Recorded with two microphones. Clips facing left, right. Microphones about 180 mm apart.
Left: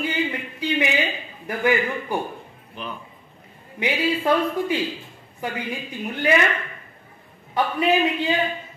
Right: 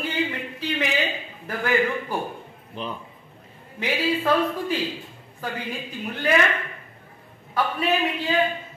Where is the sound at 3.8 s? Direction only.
15° left (ahead or behind).